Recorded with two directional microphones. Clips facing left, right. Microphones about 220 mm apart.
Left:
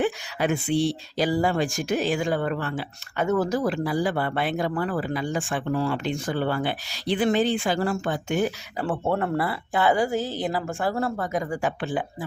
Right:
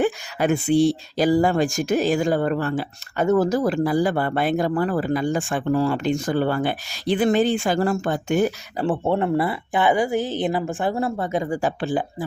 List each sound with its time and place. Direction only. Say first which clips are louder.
0.0 s speech: right 3 dB; 45° right (ahead or behind)
8.8 s speech: right 4 dB; 25° right (ahead or behind)